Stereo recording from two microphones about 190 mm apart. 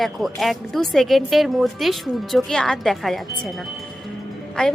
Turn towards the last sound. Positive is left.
turn(degrees=5)  # may be behind; listen again after turning